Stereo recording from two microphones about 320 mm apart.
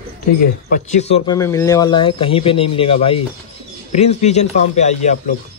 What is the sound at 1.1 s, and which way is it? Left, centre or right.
A man's voice, centre.